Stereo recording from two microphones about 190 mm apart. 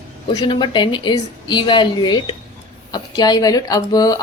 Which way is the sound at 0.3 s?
25° left (ahead or behind).